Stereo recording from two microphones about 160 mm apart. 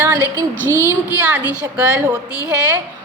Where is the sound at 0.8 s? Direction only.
10° right (ahead or behind).